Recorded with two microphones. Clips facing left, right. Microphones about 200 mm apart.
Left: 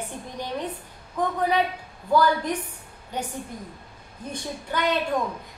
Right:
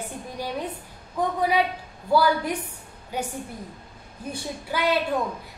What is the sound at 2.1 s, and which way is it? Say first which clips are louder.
A woman's voice: even; 10° right (ahead or behind).